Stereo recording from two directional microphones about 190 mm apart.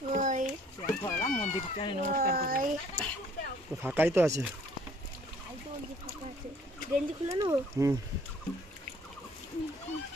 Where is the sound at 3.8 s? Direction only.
10° right (ahead or behind).